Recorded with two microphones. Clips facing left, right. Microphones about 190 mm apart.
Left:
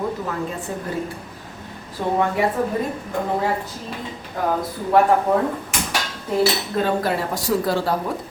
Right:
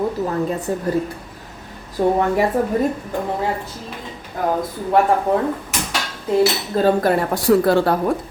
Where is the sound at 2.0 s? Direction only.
45° right (ahead or behind).